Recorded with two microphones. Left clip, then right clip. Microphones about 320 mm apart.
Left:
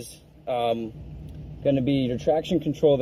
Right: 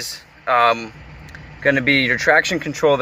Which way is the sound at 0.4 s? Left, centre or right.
Right.